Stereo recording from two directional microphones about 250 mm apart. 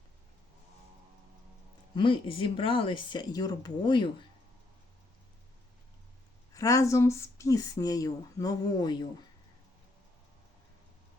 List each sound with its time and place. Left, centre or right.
2.0 s speech: left
6.5 s speech: centre